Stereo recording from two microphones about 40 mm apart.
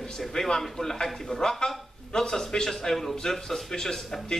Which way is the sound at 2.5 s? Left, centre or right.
Centre.